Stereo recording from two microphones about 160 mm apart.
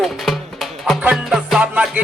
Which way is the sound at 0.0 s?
Centre (ahead or behind).